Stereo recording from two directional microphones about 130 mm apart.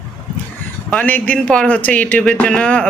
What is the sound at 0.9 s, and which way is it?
Speech, 10° left (ahead or behind).